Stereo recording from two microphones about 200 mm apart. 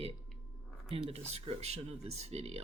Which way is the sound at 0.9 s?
30° right (ahead or behind).